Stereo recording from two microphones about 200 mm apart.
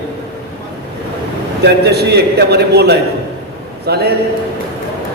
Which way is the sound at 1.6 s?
55° right (ahead or behind).